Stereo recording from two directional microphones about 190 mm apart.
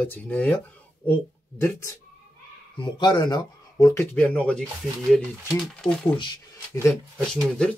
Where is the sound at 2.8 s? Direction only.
25° left (ahead or behind); by 4.6 s 5° left (ahead or behind).